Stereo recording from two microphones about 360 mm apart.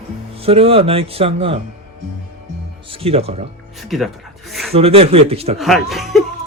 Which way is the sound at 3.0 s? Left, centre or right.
Centre.